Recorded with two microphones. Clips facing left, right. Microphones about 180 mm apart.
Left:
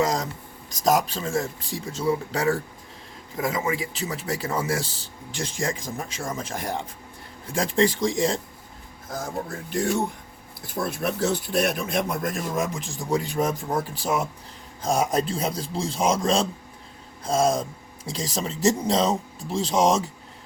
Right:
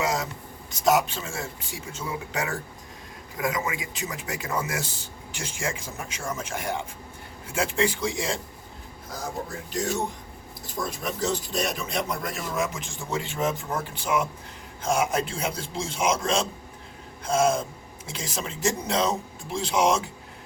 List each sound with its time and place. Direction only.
0.0 s a sound: 40° left (ahead or behind)
0.9 s speech: 35° left (ahead or behind)
10.8 s speech: 60° left (ahead or behind)
12.8 s speech: 35° left (ahead or behind)